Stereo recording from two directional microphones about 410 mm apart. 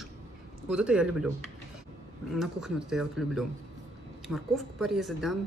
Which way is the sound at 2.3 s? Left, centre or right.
Centre.